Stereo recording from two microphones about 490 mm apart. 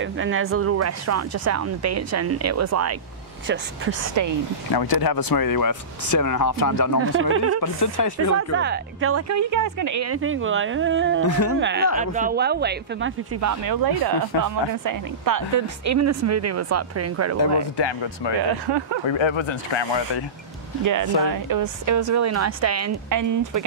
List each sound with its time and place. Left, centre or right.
0.0 s speech: right
4.1 s speech: right
4.7 s speech: left
7.0 s a woman's voice: right
7.6 s speech: left
8.4 s a woman's voice: right
11.2 s speech: left
11.6 s speech: centre
17.7 s speech: left
18.7 s speech: right
19.0 s speech: left
20.8 s speech: right